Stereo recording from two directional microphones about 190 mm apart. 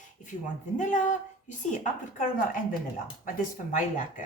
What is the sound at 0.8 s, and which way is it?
A woman's voice, 40° left (ahead or behind).